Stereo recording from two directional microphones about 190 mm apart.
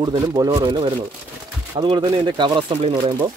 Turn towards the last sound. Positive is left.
turn(degrees=-20)  # may be behind; listen again after turning